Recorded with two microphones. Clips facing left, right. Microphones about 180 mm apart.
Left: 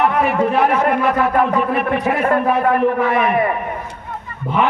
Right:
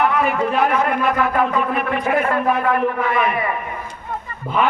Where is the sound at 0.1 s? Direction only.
40° left (ahead or behind).